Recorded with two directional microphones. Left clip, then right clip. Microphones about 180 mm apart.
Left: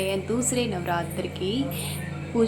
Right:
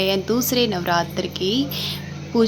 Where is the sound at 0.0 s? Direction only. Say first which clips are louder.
Right 6 dB; 50° right (ahead or behind).